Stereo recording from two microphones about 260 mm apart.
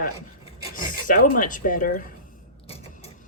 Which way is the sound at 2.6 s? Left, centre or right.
Left.